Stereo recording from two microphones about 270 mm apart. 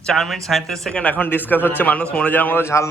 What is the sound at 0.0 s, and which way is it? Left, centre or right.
A man's voice, centre.